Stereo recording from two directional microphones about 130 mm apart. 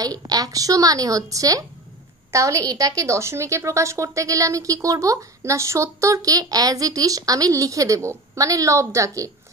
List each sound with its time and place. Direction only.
0.0 s a woman's voice: 30° right (ahead or behind)